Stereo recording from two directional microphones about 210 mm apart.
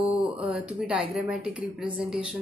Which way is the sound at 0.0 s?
5° right (ahead or behind).